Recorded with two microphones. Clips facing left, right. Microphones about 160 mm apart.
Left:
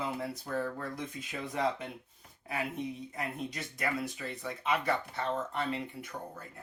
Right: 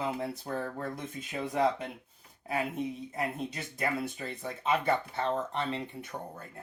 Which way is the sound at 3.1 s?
30° right (ahead or behind).